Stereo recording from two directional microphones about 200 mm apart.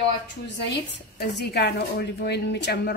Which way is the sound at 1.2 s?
55° left (ahead or behind).